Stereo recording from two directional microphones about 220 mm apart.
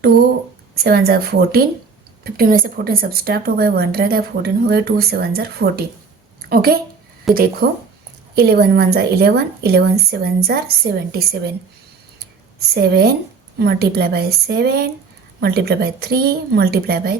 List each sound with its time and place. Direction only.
0.9 s a woman's voice: 45° right (ahead or behind)
12.5 s a woman's voice: 45° right (ahead or behind)